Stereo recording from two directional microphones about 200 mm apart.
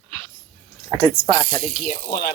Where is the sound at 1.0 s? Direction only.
10° left (ahead or behind).